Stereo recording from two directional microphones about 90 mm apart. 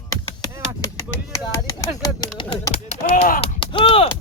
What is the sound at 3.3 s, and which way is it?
Speech, 75° left (ahead or behind).